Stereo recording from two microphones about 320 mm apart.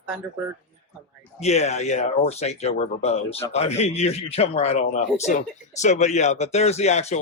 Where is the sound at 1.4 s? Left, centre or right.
Centre.